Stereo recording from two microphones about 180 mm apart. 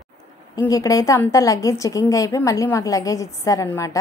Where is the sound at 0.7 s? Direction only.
20° left (ahead or behind).